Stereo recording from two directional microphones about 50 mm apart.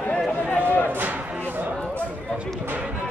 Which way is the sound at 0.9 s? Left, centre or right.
Right.